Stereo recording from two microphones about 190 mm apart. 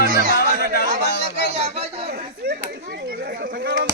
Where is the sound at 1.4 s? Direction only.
35° right (ahead or behind).